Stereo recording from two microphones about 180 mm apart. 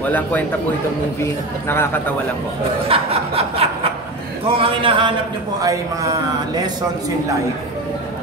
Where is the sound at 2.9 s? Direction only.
30° right (ahead or behind).